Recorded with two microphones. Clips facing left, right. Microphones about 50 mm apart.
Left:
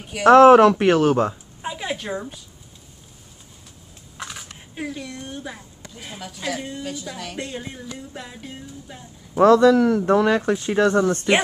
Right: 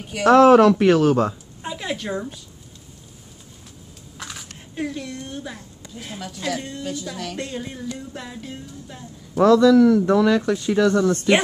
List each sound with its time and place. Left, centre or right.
0.2 s speech: left; by 2.3 s centre
4.2 s speech: centre
9.4 s speech: left